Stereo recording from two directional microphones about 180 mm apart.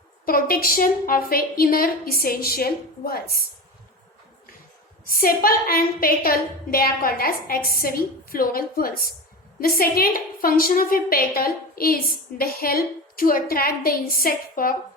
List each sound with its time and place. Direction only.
0.3 s a woman's voice: 55° left (ahead or behind)
5.0 s a woman's voice: 55° left (ahead or behind)